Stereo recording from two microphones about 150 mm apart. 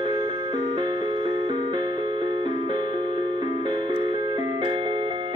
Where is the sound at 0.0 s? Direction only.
35° right (ahead or behind).